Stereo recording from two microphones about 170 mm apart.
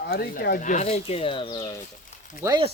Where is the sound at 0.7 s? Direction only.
40° left (ahead or behind); by 1.8 s 20° left (ahead or behind).